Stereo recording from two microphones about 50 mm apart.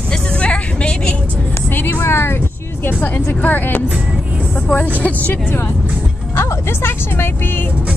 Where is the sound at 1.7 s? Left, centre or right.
Left.